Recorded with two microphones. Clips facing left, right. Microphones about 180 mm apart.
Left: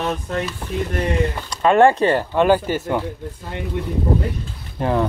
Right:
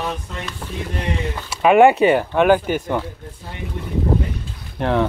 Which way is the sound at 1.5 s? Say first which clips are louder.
Right 2 dB; 10° right (ahead or behind).